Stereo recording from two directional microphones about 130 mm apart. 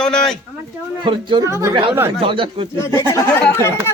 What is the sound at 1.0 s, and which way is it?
Speech, 40° right (ahead or behind).